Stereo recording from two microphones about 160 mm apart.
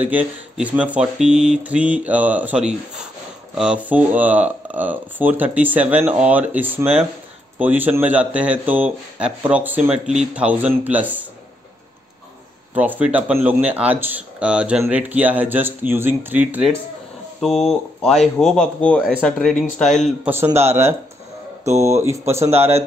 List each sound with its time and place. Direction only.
0.0 s speech: 10° right (ahead or behind)
12.7 s speech: 10° right (ahead or behind)
17.4 s speech: centre (ahead or behind)
20.2 s speech: 15° right (ahead or behind)